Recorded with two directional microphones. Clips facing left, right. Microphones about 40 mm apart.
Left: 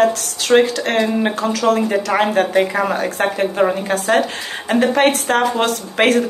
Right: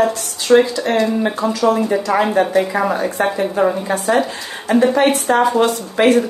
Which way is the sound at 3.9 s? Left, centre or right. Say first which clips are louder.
Even; left.